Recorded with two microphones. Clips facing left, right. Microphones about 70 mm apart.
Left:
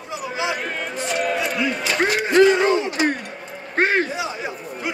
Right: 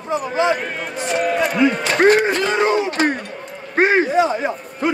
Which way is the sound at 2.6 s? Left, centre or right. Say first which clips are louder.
Right 2 dB; right.